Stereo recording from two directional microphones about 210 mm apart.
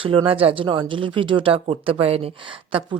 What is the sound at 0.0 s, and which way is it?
Speech, 25° right (ahead or behind).